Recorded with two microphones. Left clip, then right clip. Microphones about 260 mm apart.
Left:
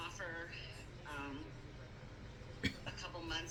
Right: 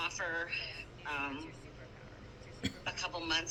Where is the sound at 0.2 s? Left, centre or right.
Right.